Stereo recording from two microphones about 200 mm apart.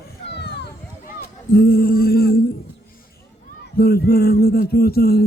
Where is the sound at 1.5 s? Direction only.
50° left (ahead or behind).